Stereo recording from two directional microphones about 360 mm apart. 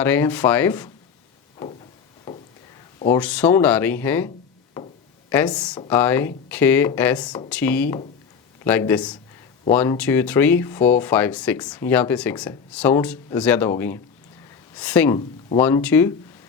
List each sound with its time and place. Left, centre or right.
0.0 s speech: centre
3.0 s speech: centre
5.3 s speech: centre